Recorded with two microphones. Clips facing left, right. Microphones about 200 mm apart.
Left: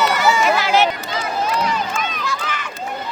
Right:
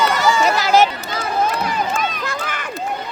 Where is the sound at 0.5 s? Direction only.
40° right (ahead or behind).